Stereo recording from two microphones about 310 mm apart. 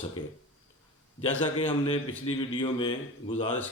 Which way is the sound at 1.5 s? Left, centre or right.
Centre.